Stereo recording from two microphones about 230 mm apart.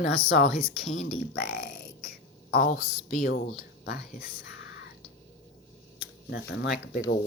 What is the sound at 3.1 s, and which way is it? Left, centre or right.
Speech, left.